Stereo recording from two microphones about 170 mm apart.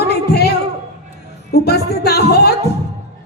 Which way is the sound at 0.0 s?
70° left (ahead or behind).